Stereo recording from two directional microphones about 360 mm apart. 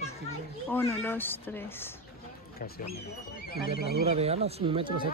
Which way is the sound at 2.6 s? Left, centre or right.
Left.